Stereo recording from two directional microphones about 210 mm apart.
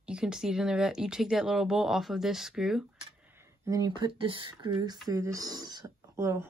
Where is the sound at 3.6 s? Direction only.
15° right (ahead or behind).